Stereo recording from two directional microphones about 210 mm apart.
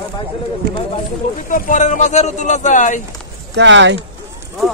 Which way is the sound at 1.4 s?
40° left (ahead or behind).